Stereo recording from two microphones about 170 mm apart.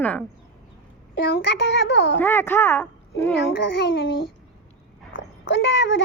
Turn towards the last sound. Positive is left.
turn(degrees=90)